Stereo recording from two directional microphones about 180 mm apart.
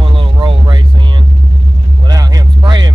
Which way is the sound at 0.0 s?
30° right (ahead or behind).